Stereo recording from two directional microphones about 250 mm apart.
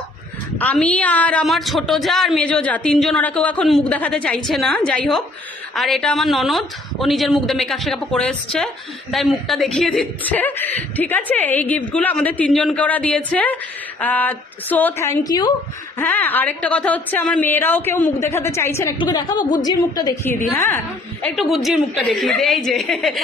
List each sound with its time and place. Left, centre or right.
0.6 s a woman's voice: centre